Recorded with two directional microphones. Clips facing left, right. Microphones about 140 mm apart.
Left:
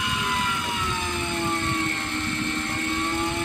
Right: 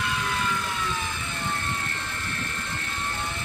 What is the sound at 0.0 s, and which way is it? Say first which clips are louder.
Vehicle: left 1 dB; 20° left (ahead or behind).